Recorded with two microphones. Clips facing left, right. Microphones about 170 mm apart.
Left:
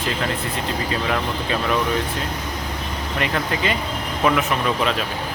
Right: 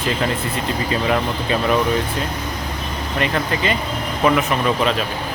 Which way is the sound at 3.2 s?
5° left (ahead or behind).